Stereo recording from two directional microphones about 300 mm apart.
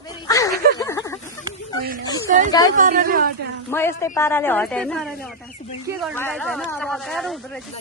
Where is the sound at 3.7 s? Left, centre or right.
Centre.